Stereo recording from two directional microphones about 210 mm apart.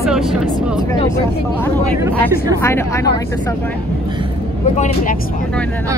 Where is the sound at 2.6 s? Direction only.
10° left (ahead or behind).